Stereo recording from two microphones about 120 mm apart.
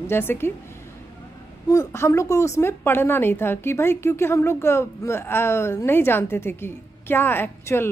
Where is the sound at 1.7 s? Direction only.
25° left (ahead or behind).